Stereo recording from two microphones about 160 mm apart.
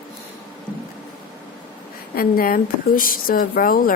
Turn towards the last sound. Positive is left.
turn(degrees=60)  # may be behind; listen again after turning